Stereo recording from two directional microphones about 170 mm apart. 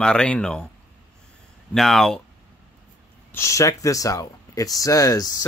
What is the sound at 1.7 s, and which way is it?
Speech, centre (ahead or behind).